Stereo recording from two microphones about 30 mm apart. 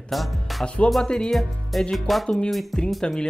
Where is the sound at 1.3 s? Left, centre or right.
Centre.